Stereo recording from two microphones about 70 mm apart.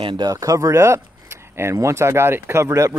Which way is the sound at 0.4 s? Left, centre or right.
Right.